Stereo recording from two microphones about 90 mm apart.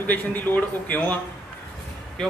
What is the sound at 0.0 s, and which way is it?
A man's voice, 20° left (ahead or behind).